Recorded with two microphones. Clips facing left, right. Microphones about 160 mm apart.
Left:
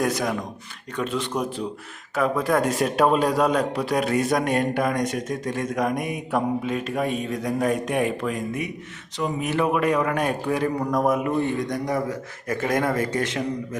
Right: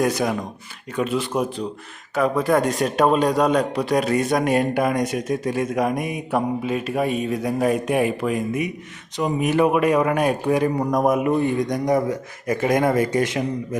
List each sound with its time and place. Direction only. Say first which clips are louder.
0.0 s a man's voice: right 3 dB; centre (ahead or behind)